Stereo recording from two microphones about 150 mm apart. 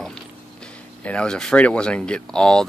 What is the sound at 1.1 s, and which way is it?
Speech, 5° left (ahead or behind).